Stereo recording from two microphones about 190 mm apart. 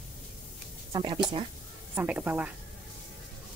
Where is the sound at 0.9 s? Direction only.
25° right (ahead or behind).